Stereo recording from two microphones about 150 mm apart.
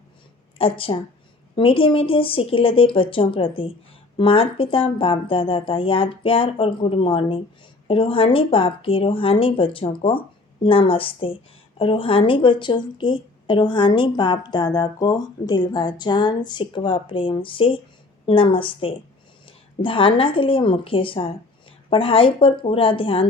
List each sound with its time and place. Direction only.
0.6 s a woman's voice: 40° left (ahead or behind)